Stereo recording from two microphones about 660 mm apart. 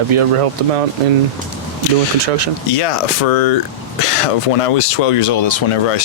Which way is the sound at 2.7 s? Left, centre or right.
Left.